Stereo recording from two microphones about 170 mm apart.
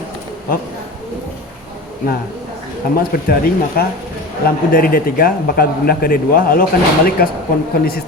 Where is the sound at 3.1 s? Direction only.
60° left (ahead or behind).